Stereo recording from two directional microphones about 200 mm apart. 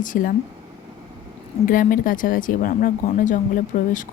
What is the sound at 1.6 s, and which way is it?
A woman's voice, 45° left (ahead or behind).